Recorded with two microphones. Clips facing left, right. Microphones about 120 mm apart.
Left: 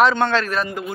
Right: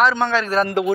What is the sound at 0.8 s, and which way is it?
Speech, 80° right.